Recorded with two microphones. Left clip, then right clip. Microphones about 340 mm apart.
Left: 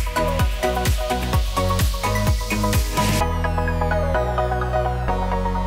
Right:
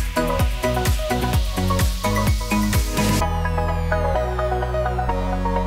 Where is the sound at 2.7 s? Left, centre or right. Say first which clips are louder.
Left 1 dB; centre.